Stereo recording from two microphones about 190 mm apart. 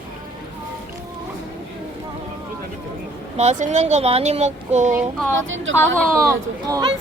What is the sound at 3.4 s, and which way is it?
Speech, 40° right (ahead or behind).